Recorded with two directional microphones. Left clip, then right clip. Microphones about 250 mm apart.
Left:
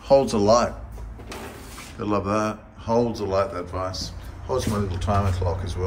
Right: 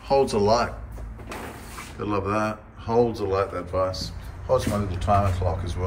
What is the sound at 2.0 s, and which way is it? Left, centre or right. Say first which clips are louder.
A man's voice: left 1 dB; centre.